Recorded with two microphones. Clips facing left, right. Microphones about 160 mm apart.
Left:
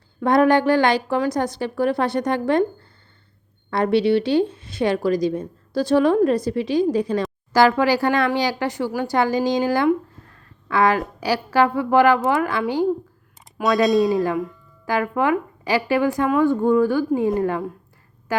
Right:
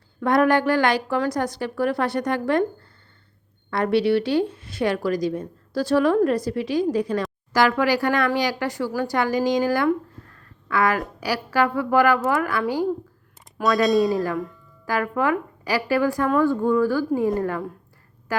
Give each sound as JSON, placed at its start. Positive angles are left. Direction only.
{"t": 0.2, "sound": "speech", "side_deg": 25}
{"t": 3.7, "sound": "speech", "side_deg": 25}
{"t": 13.8, "sound": "speech", "side_deg": 0}
{"t": 14.8, "sound": "a woman's voice", "side_deg": 20}